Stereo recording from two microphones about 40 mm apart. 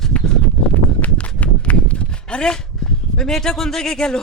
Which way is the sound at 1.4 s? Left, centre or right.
Left.